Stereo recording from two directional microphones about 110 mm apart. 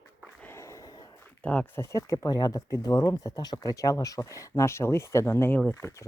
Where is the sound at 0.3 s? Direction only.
20° left (ahead or behind).